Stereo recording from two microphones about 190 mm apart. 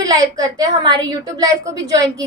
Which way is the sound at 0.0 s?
20° right (ahead or behind).